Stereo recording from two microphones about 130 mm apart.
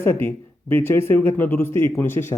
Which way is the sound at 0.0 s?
20° left (ahead or behind).